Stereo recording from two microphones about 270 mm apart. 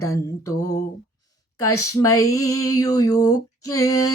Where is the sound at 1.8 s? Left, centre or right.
Left.